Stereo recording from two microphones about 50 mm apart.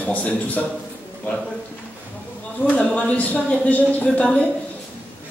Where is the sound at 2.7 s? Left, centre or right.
Left.